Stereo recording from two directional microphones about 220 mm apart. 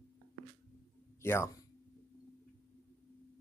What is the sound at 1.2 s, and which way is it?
Speech, 10° left (ahead or behind).